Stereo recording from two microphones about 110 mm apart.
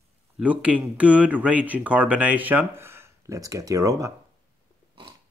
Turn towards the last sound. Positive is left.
turn(degrees=-30)  # may be behind; listen again after turning